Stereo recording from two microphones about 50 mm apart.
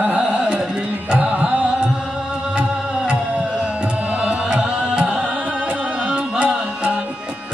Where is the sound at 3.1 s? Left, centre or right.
Centre.